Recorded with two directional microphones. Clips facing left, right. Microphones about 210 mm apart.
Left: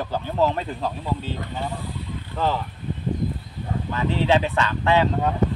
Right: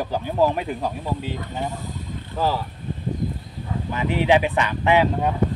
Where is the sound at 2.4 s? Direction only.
10° right (ahead or behind).